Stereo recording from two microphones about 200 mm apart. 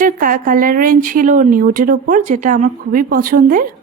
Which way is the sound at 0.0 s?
45° right (ahead or behind).